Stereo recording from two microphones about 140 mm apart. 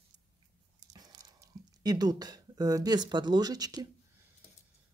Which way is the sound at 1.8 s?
30° right (ahead or behind).